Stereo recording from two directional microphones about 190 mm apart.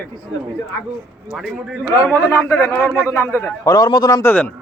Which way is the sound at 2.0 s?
10° left (ahead or behind).